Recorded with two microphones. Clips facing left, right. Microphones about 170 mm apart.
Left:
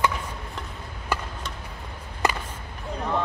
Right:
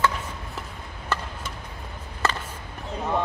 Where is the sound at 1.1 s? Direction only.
10° left (ahead or behind).